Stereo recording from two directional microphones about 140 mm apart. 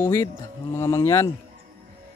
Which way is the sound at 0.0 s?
20° left (ahead or behind).